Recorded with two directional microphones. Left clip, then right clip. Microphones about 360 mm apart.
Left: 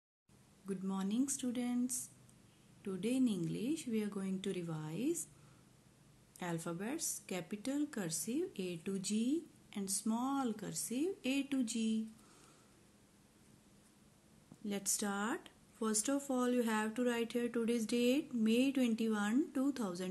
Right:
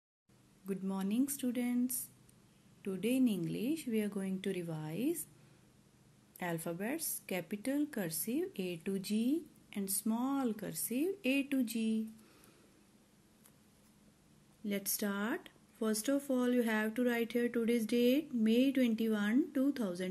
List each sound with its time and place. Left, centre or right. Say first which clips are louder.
0.7 s a woman's voice: right 2 dB; centre
6.3 s a woman's voice: right 3 dB; centre
14.6 s speech: right 1 dB; centre